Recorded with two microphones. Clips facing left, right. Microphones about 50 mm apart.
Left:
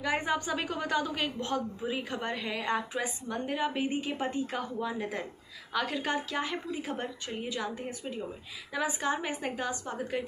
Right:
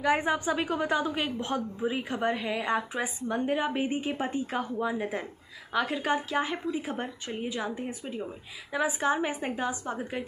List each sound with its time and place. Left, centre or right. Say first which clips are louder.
0.0 s speech: right 4 dB; right
1.4 s a woman's voice: right 2 dB; right
2.1 s a woman's voice: right 5 dB; centre